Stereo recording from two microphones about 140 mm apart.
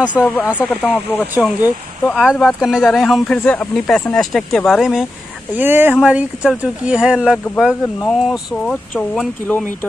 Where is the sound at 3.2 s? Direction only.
10° left (ahead or behind).